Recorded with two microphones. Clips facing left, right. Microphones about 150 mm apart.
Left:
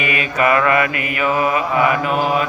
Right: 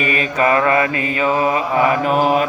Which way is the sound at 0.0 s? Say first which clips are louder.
Right 1 dB; 35° right (ahead or behind).